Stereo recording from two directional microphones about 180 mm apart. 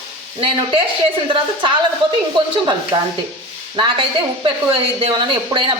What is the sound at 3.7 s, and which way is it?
Speech, 25° right (ahead or behind).